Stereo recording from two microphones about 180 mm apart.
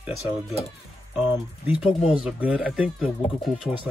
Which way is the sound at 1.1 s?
10° right (ahead or behind).